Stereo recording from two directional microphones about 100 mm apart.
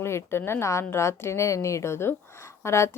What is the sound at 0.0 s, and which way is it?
A woman's voice, 25° left (ahead or behind).